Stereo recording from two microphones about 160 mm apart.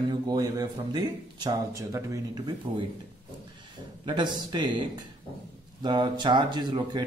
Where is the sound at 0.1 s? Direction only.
25° right (ahead or behind).